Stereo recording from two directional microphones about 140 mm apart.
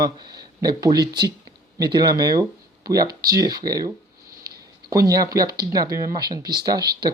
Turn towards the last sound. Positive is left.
turn(degrees=-30)  # may be behind; listen again after turning